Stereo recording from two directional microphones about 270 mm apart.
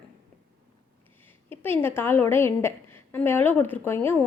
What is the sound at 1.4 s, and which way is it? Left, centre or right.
A woman's voice, centre.